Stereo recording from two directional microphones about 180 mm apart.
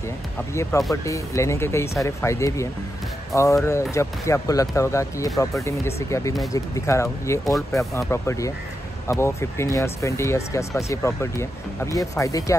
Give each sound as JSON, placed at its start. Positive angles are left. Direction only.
{"t": 0.7, "sound": "speech", "side_deg": 15}